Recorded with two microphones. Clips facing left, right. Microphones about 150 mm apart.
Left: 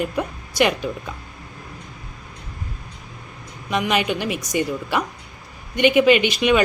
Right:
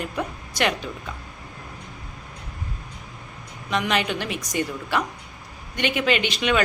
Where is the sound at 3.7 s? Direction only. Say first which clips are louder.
Left 3 dB; 10° left (ahead or behind).